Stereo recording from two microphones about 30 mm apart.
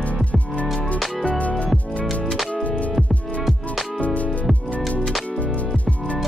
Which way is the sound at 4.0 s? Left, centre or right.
Left.